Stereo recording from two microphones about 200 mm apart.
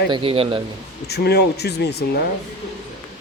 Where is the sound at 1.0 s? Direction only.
55° left (ahead or behind).